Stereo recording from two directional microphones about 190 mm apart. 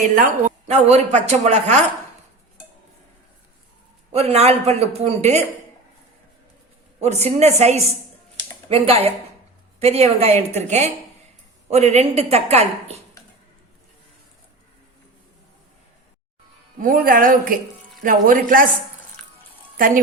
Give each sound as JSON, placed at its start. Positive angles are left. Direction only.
{"t": 0.0, "sound": "speech", "side_deg": -40}
{"t": 4.1, "sound": "speech", "side_deg": -35}
{"t": 7.0, "sound": "speech", "side_deg": -35}
{"t": 16.8, "sound": "a woman's voice", "side_deg": -45}
{"t": 19.7, "sound": "speech", "side_deg": -50}